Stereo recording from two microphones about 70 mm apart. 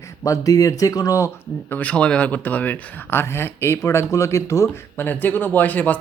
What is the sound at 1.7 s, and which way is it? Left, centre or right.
Speech, left.